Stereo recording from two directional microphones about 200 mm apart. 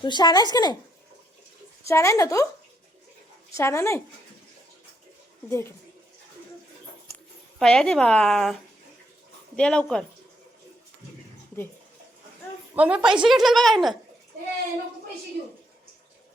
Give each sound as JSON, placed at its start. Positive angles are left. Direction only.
{"t": 0.0, "sound": "speech", "side_deg": 20}
{"t": 1.9, "sound": "speech", "side_deg": 15}
{"t": 3.6, "sound": "speech", "side_deg": 15}
{"t": 5.5, "sound": "speech", "side_deg": 15}
{"t": 7.6, "sound": "speech", "side_deg": 5}
{"t": 9.6, "sound": "speech", "side_deg": 5}
{"t": 12.7, "sound": "speech", "side_deg": -5}